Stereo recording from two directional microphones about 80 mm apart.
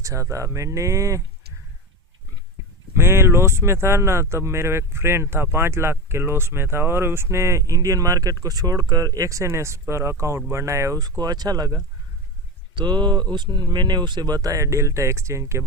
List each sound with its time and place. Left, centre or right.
0.0 s speech: right
2.9 s speech: right
11.2 s speech: right
12.7 s speech: right